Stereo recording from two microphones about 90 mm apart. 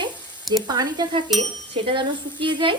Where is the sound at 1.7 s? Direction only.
70° right (ahead or behind).